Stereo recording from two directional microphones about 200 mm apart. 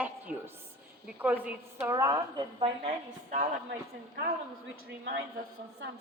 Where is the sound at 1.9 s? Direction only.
20° right (ahead or behind).